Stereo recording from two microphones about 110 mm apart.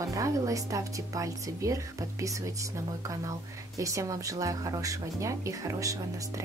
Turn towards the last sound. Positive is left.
turn(degrees=-30)  # may be behind; listen again after turning